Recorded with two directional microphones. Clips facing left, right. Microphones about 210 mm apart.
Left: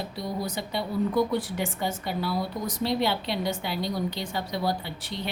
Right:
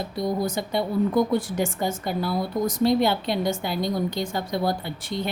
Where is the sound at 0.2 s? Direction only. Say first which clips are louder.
Right 7 dB; 45° right (ahead or behind).